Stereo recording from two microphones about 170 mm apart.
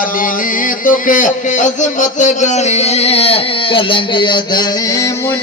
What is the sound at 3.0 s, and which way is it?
Speech, 35° left (ahead or behind).